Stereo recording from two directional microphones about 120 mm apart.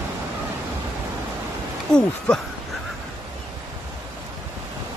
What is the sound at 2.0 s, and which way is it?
Speech, 5° left (ahead or behind).